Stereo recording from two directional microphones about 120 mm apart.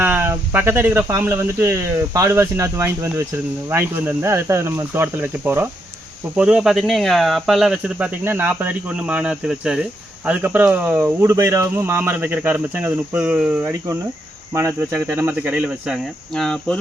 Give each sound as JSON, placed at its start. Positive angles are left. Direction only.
{"t": 0.0, "sound": "speech", "side_deg": -15}
{"t": 13.7, "sound": "speech", "side_deg": -25}
{"t": 16.3, "sound": "speech", "side_deg": 5}